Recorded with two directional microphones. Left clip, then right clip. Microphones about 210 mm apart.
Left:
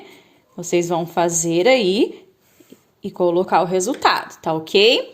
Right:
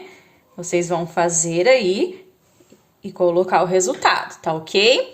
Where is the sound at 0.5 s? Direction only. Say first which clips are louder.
Left 1 dB; 35° left (ahead or behind).